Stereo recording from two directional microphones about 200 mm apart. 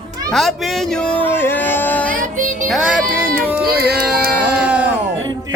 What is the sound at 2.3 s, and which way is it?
Music, 40° right (ahead or behind).